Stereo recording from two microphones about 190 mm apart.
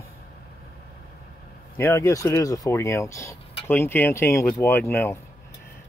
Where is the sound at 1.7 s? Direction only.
15° left (ahead or behind).